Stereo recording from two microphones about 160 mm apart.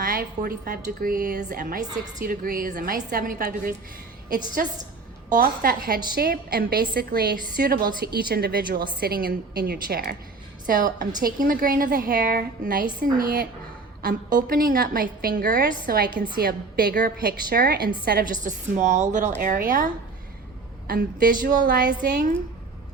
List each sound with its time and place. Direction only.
0.0 s a woman's voice: 65° right (ahead or behind)
1.4 s a woman's voice: 55° right (ahead or behind)
2.2 s a woman's voice: 70° right (ahead or behind)
10.7 s a woman's voice: 60° right (ahead or behind)
19.4 s a woman's voice: 60° right (ahead or behind)